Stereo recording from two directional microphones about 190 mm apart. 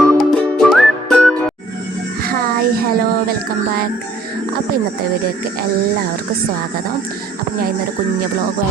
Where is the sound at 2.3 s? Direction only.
50° right (ahead or behind).